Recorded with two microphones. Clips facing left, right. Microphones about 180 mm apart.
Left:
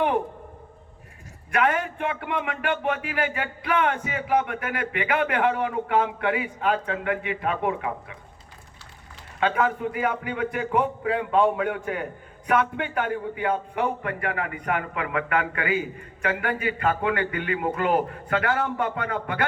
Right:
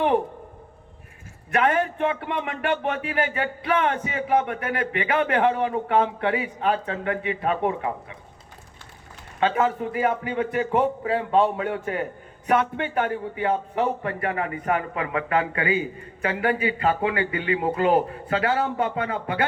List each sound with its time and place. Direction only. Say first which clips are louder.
1.5 s a man's voice: right 2 dB; 25° right (ahead or behind)
9.4 s a man's voice: right 1 dB; 25° right (ahead or behind)